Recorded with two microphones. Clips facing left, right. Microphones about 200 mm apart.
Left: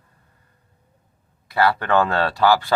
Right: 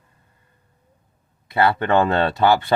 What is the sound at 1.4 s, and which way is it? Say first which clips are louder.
Speech: right 1 dB; 20° right (ahead or behind).